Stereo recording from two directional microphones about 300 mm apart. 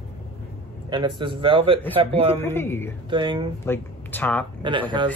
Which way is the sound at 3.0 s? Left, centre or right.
Centre.